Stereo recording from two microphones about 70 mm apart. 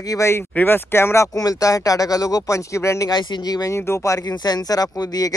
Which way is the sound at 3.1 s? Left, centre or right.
Left.